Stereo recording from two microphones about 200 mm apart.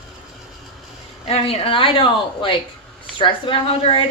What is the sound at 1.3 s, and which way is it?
Speech, 30° left (ahead or behind).